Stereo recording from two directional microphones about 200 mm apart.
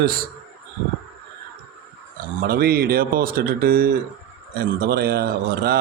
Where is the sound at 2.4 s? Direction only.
50° right (ahead or behind).